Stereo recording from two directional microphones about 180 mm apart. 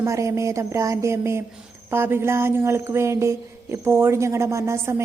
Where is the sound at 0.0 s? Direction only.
15° right (ahead or behind).